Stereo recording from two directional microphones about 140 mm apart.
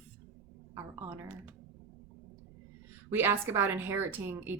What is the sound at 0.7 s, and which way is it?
Speech, 20° right (ahead or behind).